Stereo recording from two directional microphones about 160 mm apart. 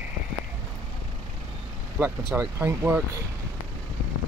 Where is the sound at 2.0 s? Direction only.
10° right (ahead or behind).